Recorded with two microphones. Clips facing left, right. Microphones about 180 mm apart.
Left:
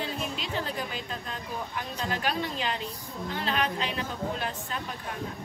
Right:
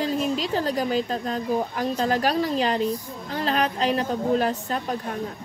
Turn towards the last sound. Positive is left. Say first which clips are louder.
# right 9 dB
turn(degrees=-40)  # may be behind; listen again after turning